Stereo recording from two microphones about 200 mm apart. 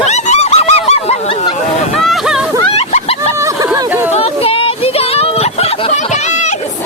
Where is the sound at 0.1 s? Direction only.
35° left (ahead or behind).